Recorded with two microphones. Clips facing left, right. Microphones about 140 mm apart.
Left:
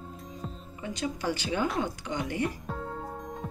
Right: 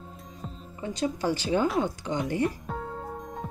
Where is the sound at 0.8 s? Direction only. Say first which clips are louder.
Right 4 dB; 35° right (ahead or behind).